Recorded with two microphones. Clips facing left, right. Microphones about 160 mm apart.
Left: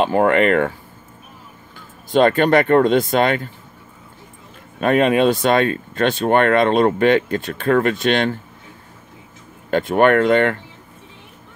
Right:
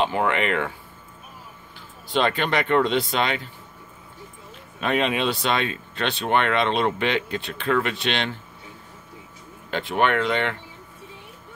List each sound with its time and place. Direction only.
0.0 s speech: 45° left (ahead or behind)
1.8 s speech: 50° left (ahead or behind)
4.7 s speech: 50° left (ahead or behind)
9.7 s speech: 50° left (ahead or behind)